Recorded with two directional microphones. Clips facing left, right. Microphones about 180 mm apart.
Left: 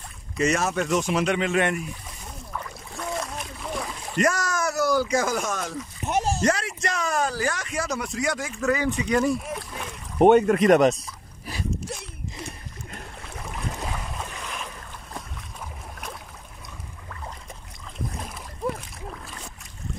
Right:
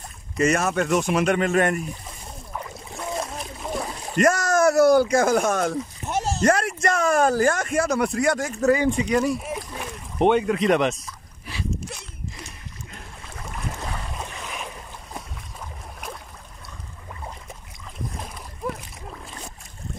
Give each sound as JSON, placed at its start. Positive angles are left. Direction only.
{"t": 0.4, "sound": "speech", "side_deg": -55}
{"t": 2.5, "sound": "splash", "side_deg": -20}
{"t": 4.2, "sound": "speech", "side_deg": -50}
{"t": 6.0, "sound": "a sound", "side_deg": 15}
{"t": 6.4, "sound": "speech", "side_deg": -55}
{"t": 8.7, "sound": "speech", "side_deg": -25}
{"t": 9.1, "sound": "speech", "side_deg": -5}
{"t": 10.1, "sound": "speech", "side_deg": 45}
{"t": 14.2, "sound": "boat", "side_deg": -10}